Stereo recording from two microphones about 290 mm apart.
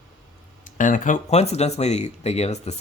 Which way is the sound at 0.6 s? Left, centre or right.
Left.